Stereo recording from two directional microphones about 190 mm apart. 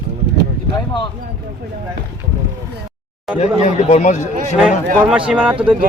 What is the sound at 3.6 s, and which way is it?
Speech, 35° left (ahead or behind).